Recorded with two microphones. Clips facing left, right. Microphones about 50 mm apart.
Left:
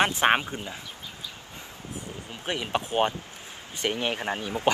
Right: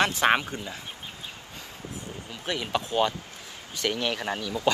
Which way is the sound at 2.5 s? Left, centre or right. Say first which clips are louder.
Even; left.